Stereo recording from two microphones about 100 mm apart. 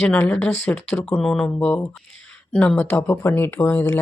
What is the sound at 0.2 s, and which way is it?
Speech, 15° left (ahead or behind).